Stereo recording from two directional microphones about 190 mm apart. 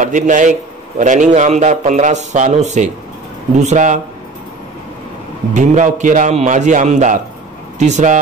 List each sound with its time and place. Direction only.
0.0 s a man's voice: 40° right (ahead or behind)
5.5 s a man's voice: 40° right (ahead or behind)